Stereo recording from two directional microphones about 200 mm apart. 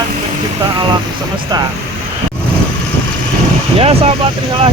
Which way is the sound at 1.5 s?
20° right (ahead or behind).